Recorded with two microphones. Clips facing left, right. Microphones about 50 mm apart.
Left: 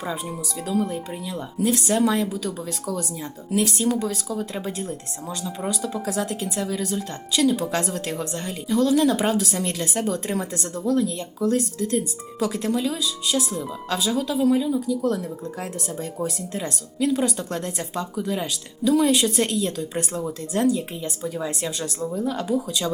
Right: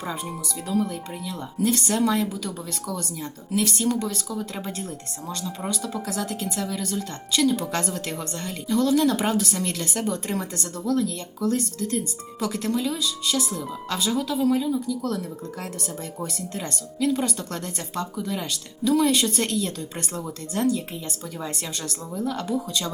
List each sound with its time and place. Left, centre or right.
0.8 s speech: centre
3.5 s speech: centre
4.5 s speech: centre; by 6.7 s left
6.7 s a woman's voice: centre
10.8 s speech: left
16.2 s speech: centre
21.3 s a woman's voice: centre
22.1 s speech: centre